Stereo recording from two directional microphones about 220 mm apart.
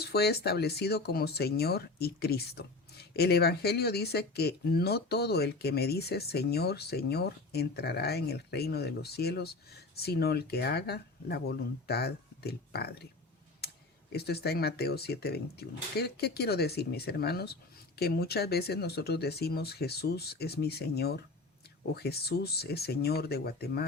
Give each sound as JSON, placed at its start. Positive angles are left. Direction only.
{"t": 0.0, "sound": "speech", "side_deg": 45}
{"t": 13.6, "sound": "computer keyboard", "side_deg": 45}
{"t": 14.1, "sound": "speech", "side_deg": 45}